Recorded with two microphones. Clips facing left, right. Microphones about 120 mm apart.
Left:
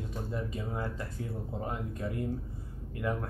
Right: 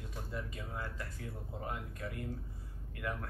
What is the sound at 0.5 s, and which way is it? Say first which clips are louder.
Speech: left 7 dB; 25° left (ahead or behind).